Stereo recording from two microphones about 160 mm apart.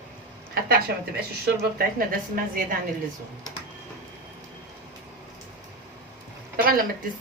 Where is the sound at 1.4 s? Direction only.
70° right (ahead or behind).